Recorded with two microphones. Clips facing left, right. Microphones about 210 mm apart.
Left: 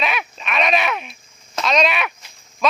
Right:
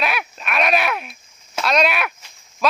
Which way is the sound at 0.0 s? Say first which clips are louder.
Even; 5° right (ahead or behind).